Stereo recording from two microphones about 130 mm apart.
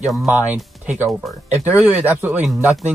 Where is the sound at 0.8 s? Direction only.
15° right (ahead or behind).